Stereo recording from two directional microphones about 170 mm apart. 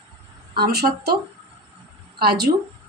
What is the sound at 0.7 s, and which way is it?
Speech, 65° right (ahead or behind).